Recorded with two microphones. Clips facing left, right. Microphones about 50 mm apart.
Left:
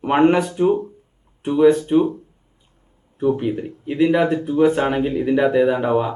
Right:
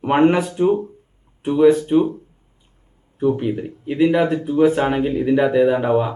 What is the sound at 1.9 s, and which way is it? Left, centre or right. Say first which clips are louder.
Speech: even; centre.